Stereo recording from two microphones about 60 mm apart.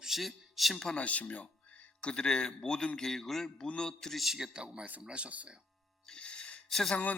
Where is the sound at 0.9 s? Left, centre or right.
Left.